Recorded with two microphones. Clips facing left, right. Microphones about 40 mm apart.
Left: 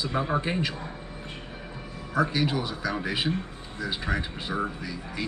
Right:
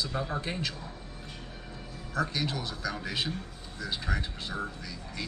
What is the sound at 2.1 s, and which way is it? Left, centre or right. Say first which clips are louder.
A man's voice: left 6 dB; centre.